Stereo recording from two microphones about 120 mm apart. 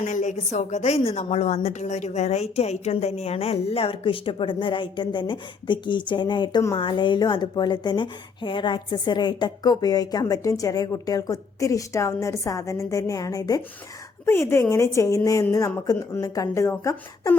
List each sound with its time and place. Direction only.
0.0 s a woman's voice: 90° left; by 17.3 s 25° left (ahead or behind)